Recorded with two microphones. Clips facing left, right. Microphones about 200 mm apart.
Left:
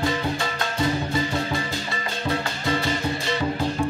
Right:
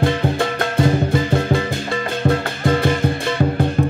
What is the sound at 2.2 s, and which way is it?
Music, 50° right (ahead or behind).